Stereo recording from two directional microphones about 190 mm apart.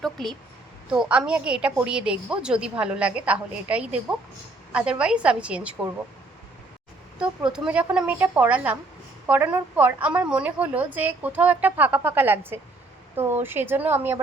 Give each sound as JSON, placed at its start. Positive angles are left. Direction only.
{"t": 0.0, "sound": "a woman's voice", "side_deg": 0}
{"t": 7.2, "sound": "a woman's voice", "side_deg": -5}